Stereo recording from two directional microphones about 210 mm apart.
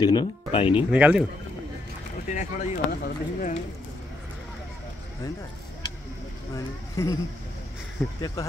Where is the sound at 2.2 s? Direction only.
35° left (ahead or behind).